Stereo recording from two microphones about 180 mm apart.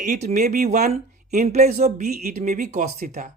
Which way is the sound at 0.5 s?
55° right (ahead or behind).